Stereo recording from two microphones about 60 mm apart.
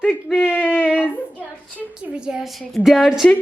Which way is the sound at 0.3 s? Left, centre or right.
Left.